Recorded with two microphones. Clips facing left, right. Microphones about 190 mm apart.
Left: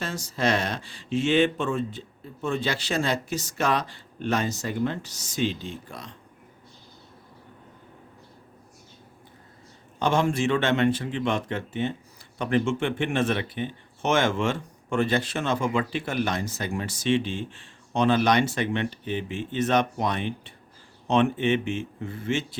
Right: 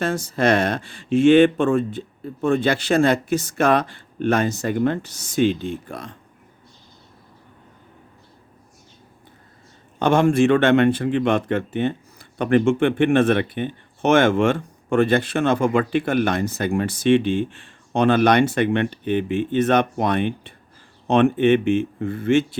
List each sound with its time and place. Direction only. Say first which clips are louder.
0.0 s speech: right 7 dB; 55° right (ahead or behind)
10.0 s speech: right 7 dB; 55° right (ahead or behind)